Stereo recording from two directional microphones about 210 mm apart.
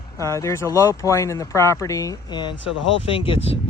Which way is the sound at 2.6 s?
65° left (ahead or behind).